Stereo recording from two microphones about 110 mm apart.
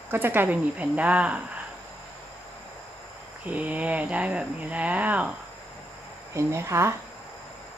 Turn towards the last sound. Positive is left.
turn(degrees=-25)  # may be behind; listen again after turning